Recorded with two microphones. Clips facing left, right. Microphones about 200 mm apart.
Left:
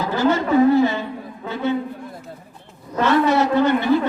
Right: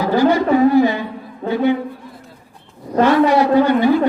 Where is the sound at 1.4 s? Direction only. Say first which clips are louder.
Right 10 dB; 45° right (ahead or behind).